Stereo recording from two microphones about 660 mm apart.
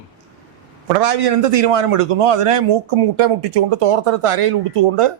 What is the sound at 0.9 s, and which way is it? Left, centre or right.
Speech, right.